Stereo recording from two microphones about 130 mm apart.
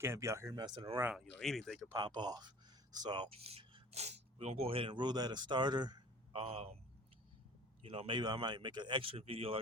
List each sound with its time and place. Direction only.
0.0 s speech: 20° right (ahead or behind)
1.1 s speech: 5° left (ahead or behind)
2.0 s speech: 35° right (ahead or behind)
3.4 s speech: 50° right (ahead or behind); by 6.4 s 35° right (ahead or behind)
6.4 s speech: 50° right (ahead or behind)
7.8 s speech: 45° right (ahead or behind)